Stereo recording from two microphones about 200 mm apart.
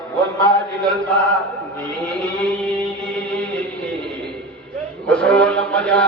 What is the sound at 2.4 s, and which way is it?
Music, 5° left (ahead or behind).